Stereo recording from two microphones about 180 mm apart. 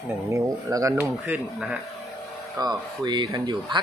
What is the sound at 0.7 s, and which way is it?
Speech, 15° right (ahead or behind).